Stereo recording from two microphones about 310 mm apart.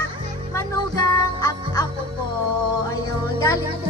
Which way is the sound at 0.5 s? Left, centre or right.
Centre.